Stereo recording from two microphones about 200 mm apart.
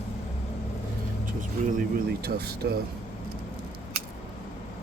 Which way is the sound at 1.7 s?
45° right (ahead or behind).